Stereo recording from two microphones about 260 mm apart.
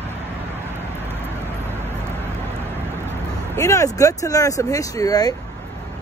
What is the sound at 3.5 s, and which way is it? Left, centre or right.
Speech, centre.